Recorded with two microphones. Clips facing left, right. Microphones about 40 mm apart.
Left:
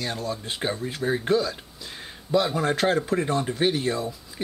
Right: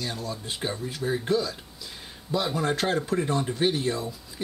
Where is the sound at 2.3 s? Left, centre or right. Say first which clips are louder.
Left 4 dB; centre.